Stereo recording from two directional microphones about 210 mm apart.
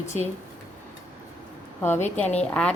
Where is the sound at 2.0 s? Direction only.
35° left (ahead or behind).